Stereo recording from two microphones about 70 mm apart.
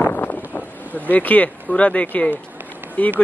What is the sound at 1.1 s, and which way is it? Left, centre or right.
Speech, left.